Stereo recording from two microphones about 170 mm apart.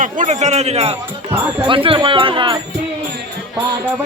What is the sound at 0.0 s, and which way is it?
A man's voice, 45° right (ahead or behind).